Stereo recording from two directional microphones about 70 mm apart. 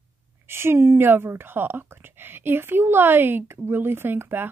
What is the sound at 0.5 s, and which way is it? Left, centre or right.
A woman's voice, right.